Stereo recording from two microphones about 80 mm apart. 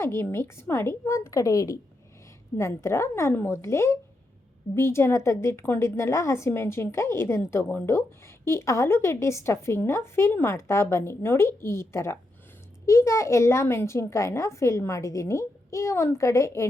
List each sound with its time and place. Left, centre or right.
0.0 s a woman's voice: left